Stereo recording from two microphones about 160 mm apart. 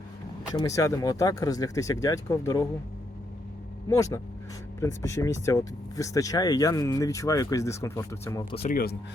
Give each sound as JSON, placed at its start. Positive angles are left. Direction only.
{"t": 0.5, "sound": "speech", "side_deg": 20}
{"t": 3.8, "sound": "speech", "side_deg": 20}
{"t": 8.6, "sound": "speech", "side_deg": 65}